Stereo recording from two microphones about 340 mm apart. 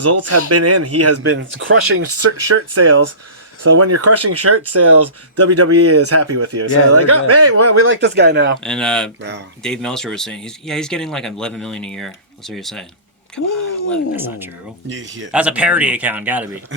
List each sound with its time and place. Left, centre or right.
0.0 s speech: right
2.5 s speech: right
8.6 s speech: centre
13.9 s speech: centre
14.8 s speech: right
15.3 s speech: centre